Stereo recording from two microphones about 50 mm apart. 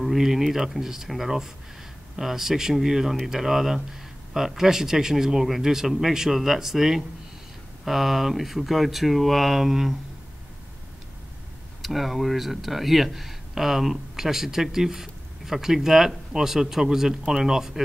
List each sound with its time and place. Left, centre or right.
0.0 s speech: centre
11.8 s speech: centre